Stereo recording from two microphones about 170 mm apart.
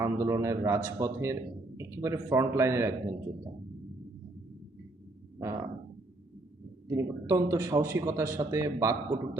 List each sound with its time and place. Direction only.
0.0 s speech: 20° right (ahead or behind)
5.4 s speech: 20° right (ahead or behind)
6.8 s speech: 20° right (ahead or behind)